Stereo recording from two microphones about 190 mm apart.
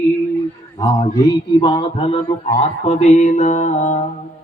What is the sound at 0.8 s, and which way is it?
Mantra, 20° left (ahead or behind).